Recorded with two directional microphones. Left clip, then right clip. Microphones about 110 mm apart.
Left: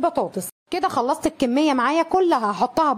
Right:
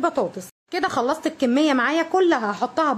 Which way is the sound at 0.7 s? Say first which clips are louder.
Left 1 dB; 60° left (ahead or behind).